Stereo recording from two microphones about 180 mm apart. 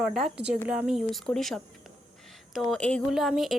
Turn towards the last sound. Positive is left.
turn(degrees=0)  # may be behind; listen again after turning